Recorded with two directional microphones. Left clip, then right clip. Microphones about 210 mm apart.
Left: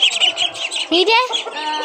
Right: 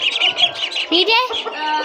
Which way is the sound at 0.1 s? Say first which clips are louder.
Right 1 dB; 5° left (ahead or behind).